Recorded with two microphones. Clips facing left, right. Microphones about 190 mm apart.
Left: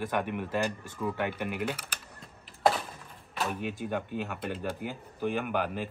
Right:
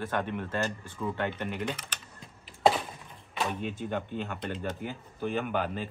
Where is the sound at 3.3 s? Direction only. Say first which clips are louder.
Even; 5° left (ahead or behind).